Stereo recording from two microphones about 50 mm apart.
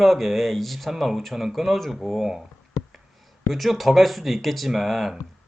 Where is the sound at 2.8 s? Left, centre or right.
Left.